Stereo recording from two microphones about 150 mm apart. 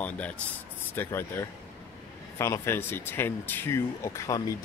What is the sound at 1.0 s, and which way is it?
Speech, 15° left (ahead or behind).